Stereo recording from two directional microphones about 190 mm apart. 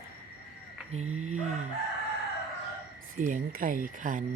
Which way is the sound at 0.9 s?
35° right (ahead or behind).